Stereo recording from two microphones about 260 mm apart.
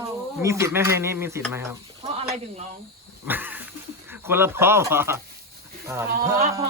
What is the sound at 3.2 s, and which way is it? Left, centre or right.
Cat, centre.